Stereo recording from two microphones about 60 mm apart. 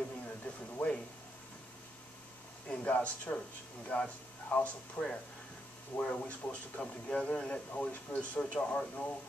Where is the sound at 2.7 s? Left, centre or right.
Left.